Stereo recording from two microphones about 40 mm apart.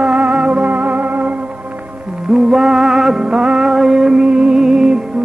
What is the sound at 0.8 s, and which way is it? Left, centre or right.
Music, right.